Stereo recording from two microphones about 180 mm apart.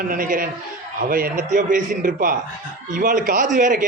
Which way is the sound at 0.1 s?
50° right (ahead or behind).